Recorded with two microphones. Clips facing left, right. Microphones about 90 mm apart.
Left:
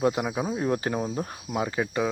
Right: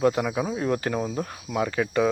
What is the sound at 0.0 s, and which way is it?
Speech, 15° left (ahead or behind).